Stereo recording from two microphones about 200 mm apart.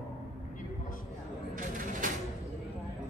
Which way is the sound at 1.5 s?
40° right (ahead or behind).